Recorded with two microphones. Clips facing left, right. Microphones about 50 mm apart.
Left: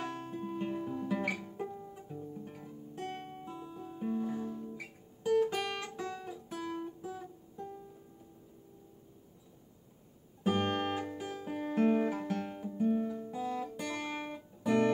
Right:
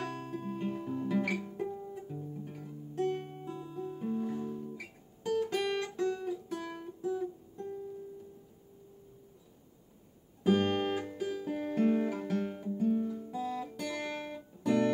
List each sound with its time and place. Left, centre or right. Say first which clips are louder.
0.0 s guitar: right 1 dB; centre
10.4 s music: right 3 dB; centre
12.1 s guitar: right 2 dB; centre
12.7 s guitar: even; left
13.3 s music: even; centre